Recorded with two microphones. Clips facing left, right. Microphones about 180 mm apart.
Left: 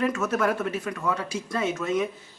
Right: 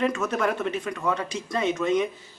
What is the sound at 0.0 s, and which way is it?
A man's voice, 5° left (ahead or behind).